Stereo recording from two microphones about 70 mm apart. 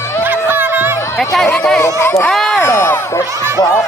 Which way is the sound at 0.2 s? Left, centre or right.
Right.